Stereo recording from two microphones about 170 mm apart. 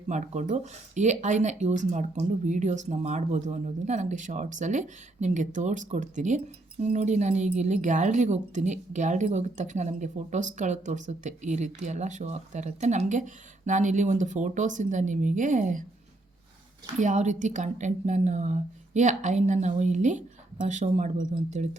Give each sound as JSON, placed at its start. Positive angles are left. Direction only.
{"t": 0.1, "sound": "speech", "side_deg": -45}
{"t": 17.0, "sound": "speech", "side_deg": -45}